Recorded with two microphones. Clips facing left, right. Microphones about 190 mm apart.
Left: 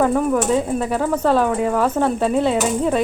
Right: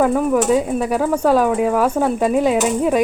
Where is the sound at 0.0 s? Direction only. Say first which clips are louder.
Right 2 dB; centre (ahead or behind).